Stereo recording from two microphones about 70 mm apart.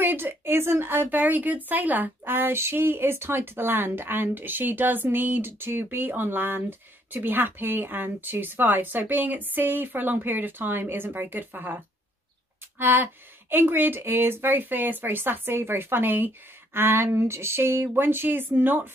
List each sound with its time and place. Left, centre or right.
0.0 s speech: right